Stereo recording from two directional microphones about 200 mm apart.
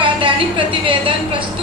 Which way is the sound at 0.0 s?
25° right (ahead or behind).